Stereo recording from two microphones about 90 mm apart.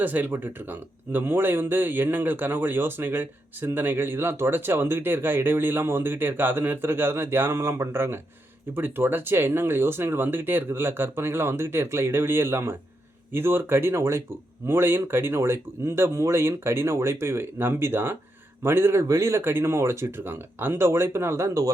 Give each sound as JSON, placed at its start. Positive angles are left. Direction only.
{"t": 0.0, "sound": "speech", "side_deg": -20}